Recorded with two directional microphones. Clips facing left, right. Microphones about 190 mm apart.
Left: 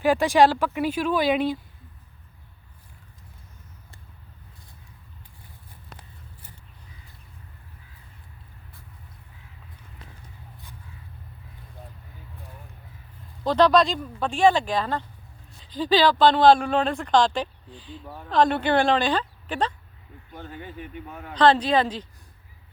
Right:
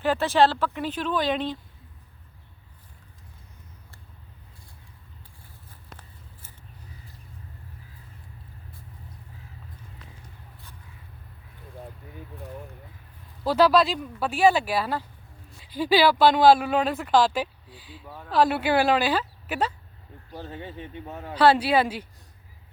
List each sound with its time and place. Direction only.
0.0 s speech: 10° left (ahead or behind)
13.4 s a woman's voice: 5° right (ahead or behind)
20.3 s speech: 30° right (ahead or behind)
21.3 s speech: 10° right (ahead or behind)